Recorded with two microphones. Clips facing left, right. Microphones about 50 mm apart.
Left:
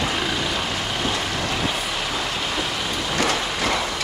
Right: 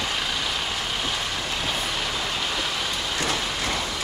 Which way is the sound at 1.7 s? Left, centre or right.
Centre.